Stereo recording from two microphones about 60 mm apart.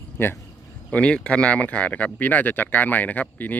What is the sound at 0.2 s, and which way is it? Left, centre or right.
Speech, left.